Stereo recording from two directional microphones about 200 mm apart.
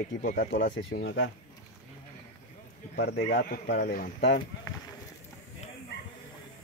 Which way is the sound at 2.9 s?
50° left (ahead or behind).